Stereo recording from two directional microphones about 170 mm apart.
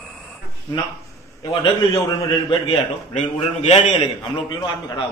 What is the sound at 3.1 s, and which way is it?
A man's voice, 40° left (ahead or behind).